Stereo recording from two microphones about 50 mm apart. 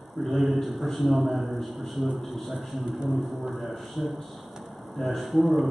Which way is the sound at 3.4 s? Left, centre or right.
Centre.